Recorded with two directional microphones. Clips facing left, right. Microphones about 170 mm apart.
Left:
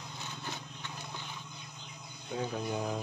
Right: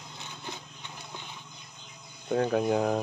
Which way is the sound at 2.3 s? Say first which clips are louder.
Right 10 dB; 65° right (ahead or behind).